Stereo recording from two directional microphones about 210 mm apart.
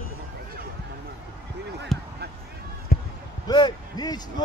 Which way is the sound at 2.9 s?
45° left (ahead or behind).